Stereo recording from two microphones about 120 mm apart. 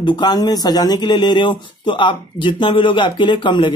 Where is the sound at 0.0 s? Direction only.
35° left (ahead or behind).